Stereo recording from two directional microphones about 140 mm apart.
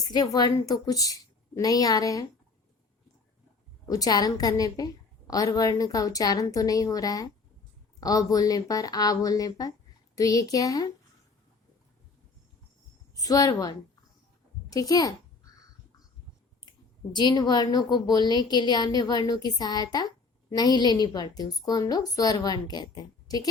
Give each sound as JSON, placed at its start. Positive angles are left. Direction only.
{"t": 0.0, "sound": "a woman's voice", "side_deg": 30}
{"t": 3.8, "sound": "a woman's voice", "side_deg": 25}
{"t": 13.1, "sound": "a woman's voice", "side_deg": 25}
{"t": 16.6, "sound": "a woman's voice", "side_deg": 30}